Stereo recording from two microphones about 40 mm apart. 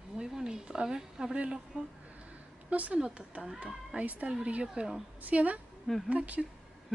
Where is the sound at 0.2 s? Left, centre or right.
Right.